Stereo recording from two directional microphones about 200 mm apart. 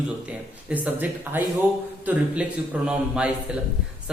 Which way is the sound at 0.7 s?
5° right (ahead or behind).